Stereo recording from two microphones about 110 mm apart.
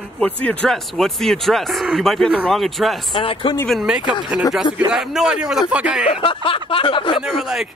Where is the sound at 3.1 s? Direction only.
50° left (ahead or behind).